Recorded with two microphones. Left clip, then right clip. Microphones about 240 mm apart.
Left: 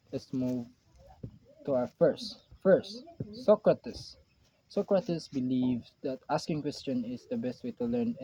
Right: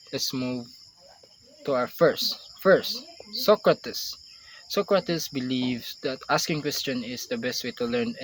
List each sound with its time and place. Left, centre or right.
0.1 s speech: centre
1.6 s speech: right
2.0 s speech: centre